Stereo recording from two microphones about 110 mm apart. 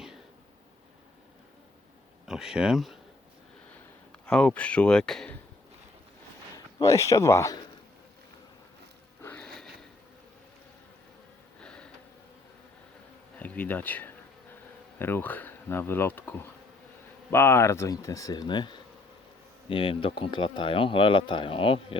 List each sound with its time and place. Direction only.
2.2 s speech: 5° right (ahead or behind)
4.3 s speech: 10° left (ahead or behind)
6.8 s speech: 30° left (ahead or behind)
9.4 s a sound: 5° left (ahead or behind)
11.6 s a sound: 10° left (ahead or behind)
13.4 s speech: 15° left (ahead or behind)
17.3 s speech: 20° left (ahead or behind); by 18.8 s 45° left (ahead or behind)
19.7 s speech: 55° left (ahead or behind)